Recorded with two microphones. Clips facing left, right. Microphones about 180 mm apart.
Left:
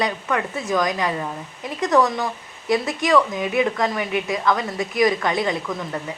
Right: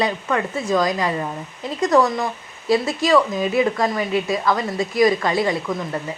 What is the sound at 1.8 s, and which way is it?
Speech, centre (ahead or behind).